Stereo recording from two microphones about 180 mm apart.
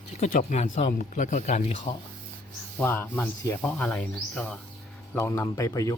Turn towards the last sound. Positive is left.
turn(degrees=20)  # may be behind; listen again after turning